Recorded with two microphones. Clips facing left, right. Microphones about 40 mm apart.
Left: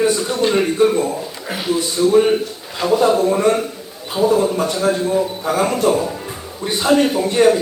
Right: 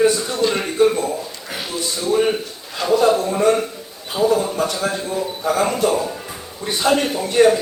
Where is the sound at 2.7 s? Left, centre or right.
Centre.